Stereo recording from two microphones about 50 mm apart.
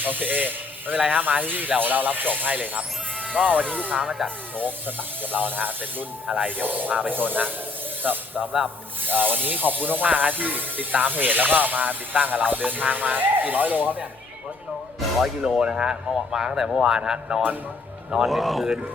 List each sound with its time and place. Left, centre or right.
0.0 s speech: right
3.2 s music: centre
3.9 s speech: centre
4.5 s speech: right
15.4 s speech: centre
18.3 s speech: centre